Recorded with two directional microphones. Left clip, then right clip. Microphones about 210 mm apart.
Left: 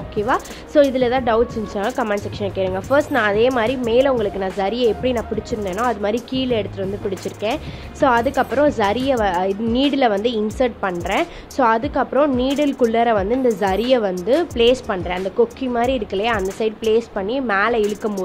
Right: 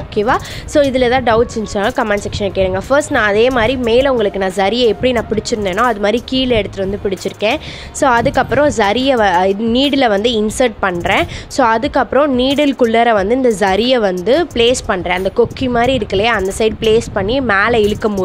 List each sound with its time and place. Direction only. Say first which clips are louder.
0.1 s speech: right 6 dB; 40° right (ahead or behind)